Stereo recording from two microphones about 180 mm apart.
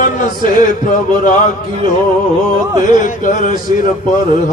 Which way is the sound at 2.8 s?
45° left (ahead or behind).